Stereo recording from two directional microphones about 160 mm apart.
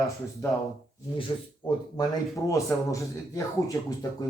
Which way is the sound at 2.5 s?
20° left (ahead or behind).